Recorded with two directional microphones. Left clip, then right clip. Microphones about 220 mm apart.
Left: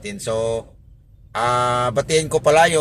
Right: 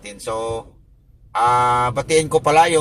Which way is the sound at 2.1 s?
20° left (ahead or behind).